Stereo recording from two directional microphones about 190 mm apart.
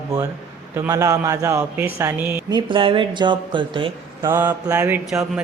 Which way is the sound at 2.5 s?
25° right (ahead or behind).